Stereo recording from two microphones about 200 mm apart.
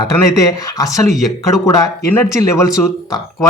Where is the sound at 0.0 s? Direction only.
20° left (ahead or behind).